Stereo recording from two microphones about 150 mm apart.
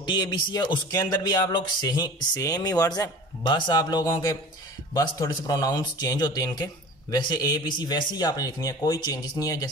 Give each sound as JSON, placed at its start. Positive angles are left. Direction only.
{"t": 0.0, "sound": "speech", "side_deg": 30}